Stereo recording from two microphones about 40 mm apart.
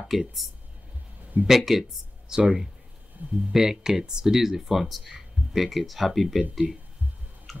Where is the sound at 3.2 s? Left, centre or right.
Right.